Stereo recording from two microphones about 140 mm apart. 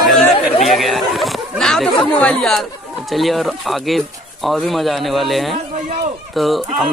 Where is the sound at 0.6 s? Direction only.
Centre (ahead or behind).